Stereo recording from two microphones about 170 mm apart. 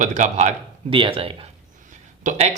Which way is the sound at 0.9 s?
30° right (ahead or behind).